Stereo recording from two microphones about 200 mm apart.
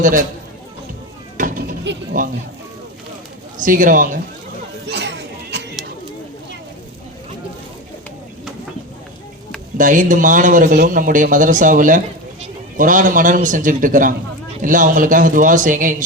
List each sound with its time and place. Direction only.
0.0 s a man's voice: 40° right (ahead or behind)
1.4 s a sound: 40° right (ahead or behind)
1.9 s speech: 60° right (ahead or behind)
3.6 s speech: 40° right (ahead or behind)
4.9 s a sound: 60° right (ahead or behind)
9.7 s speech: 40° right (ahead or behind)